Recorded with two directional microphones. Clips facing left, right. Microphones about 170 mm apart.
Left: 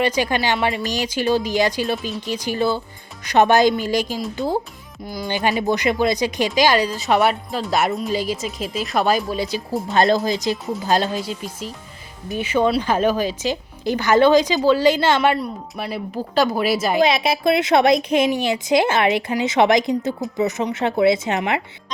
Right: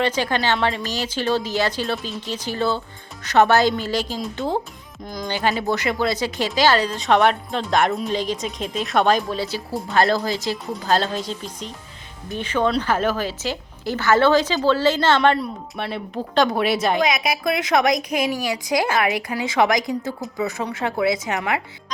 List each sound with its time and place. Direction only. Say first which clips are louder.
0.0 s speech: left 1 dB; 10° left (ahead or behind)
4.2 s a woman's voice: left 2 dB; 5° left (ahead or behind)
5.4 s a woman's voice: left 2 dB; 15° left (ahead or behind); by 17.0 s centre (ahead or behind)
17.0 s speech: left 4 dB; 30° left (ahead or behind)